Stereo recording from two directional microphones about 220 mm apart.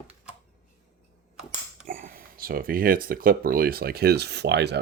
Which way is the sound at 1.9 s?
40° right (ahead or behind).